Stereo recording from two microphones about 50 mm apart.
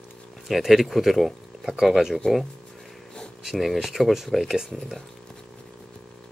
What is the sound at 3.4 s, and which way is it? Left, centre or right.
Speech, centre.